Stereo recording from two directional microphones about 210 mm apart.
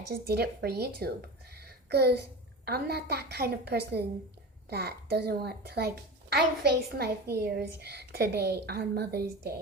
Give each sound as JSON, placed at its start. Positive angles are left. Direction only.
{"t": 0.1, "sound": "a woman's voice", "side_deg": -50}
{"t": 1.5, "sound": "a sound", "side_deg": -50}
{"t": 2.6, "sound": "a woman's voice", "side_deg": -45}